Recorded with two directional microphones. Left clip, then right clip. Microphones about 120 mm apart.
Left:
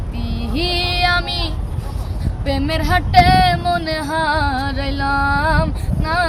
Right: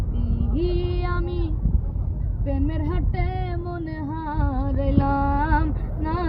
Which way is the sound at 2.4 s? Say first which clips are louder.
Left 8 dB; 50° left (ahead or behind).